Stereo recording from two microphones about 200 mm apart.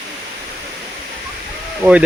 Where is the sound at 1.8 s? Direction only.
10° right (ahead or behind).